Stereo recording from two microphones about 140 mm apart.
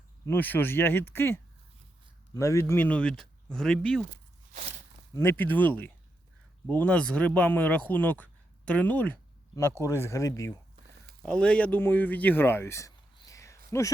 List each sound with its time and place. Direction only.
0.3 s speech: 15° left (ahead or behind)
5.1 s speech: 15° left (ahead or behind)
11.2 s speech: 5° left (ahead or behind)
13.1 s a sound: 25° left (ahead or behind)
13.7 s speech: 20° left (ahead or behind)